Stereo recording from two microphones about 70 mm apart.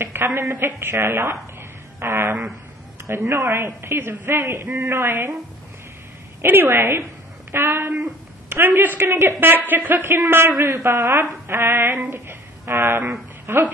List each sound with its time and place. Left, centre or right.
0.0 s a woman's voice: right
2.0 s a sound: right
3.1 s a man's voice: right
4.3 s a man's voice: right
4.8 s a man's voice: right
6.4 s a man's voice: right